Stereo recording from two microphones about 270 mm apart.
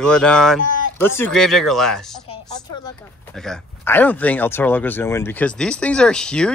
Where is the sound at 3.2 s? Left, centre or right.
Centre.